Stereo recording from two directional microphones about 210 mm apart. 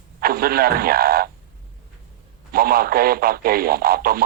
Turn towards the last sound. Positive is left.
turn(degrees=-45)  # may be behind; listen again after turning